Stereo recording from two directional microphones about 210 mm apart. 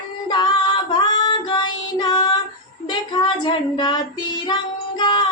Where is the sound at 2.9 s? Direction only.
20° left (ahead or behind).